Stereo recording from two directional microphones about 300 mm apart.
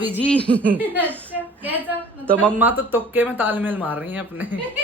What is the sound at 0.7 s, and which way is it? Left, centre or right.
A woman's voice, centre.